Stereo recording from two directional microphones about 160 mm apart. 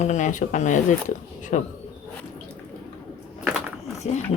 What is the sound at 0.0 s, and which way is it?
Speech, 50° left (ahead or behind).